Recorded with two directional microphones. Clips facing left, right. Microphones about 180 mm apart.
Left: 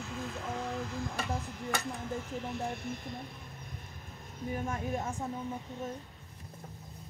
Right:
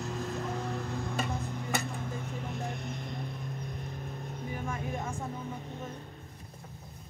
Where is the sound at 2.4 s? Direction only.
55° right (ahead or behind).